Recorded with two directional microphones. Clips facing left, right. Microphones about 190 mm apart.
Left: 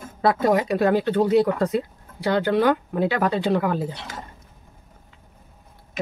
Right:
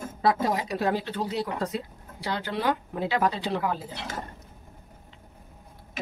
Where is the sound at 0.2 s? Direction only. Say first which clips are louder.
Left 6 dB; 60° left (ahead or behind).